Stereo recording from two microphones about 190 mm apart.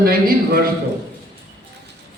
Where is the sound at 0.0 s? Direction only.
55° right (ahead or behind).